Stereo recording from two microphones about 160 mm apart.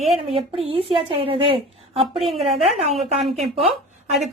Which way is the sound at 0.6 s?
35° right (ahead or behind).